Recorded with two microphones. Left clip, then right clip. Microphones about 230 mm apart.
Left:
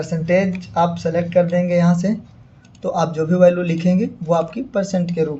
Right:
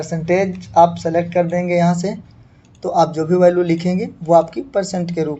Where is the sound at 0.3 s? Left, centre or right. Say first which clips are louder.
Even; right.